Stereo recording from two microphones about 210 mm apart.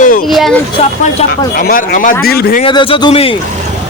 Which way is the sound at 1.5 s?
45° left (ahead or behind).